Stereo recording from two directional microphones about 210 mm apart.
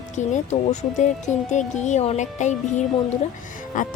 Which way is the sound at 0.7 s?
35° left (ahead or behind).